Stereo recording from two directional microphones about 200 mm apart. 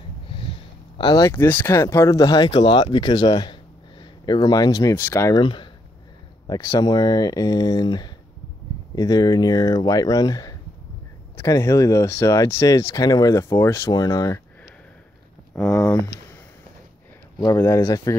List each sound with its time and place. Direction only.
0.3 s speech: 25° left (ahead or behind)
5.4 s speech: 25° left (ahead or behind)
15.5 s speech: 5° left (ahead or behind)
17.6 s speech: 15° left (ahead or behind)